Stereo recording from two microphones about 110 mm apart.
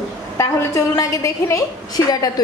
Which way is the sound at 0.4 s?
25° left (ahead or behind).